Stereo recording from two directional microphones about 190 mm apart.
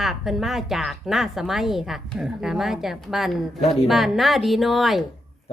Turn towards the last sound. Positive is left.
turn(degrees=0)  # may be behind; listen again after turning